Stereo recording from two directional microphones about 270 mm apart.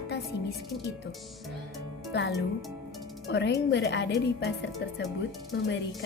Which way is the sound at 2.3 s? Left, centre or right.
Centre.